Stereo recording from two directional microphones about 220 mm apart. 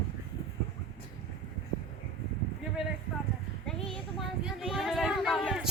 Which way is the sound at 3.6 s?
Centre (ahead or behind).